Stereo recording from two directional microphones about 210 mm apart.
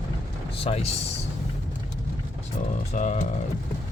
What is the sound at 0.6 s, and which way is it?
Speech, 30° left (ahead or behind).